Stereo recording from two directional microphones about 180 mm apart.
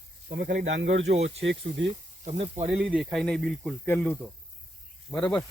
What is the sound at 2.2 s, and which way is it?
Speech, 40° right (ahead or behind).